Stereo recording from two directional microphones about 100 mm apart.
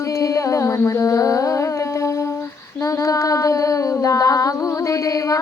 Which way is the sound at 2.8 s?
35° left (ahead or behind).